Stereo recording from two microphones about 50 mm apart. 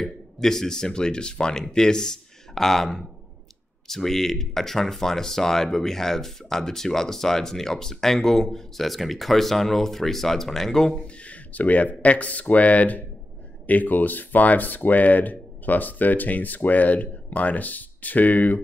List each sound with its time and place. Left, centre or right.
0.0 s speech: centre
11.1 s a sound: left
11.9 s speech: left